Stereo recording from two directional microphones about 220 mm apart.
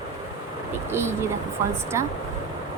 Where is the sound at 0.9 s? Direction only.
10° right (ahead or behind).